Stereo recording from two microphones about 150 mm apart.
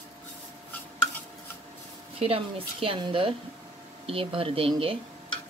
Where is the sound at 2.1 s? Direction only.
40° right (ahead or behind).